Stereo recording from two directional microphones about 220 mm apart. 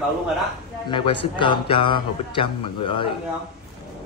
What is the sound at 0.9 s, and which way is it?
Speech, 25° left (ahead or behind).